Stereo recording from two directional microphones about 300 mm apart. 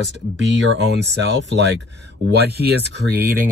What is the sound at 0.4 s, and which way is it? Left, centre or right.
Speech, right.